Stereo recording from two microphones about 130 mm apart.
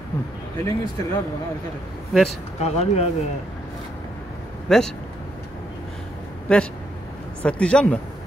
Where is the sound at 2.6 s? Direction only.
55° left (ahead or behind).